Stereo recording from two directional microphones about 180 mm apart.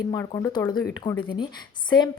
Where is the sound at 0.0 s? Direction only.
20° left (ahead or behind).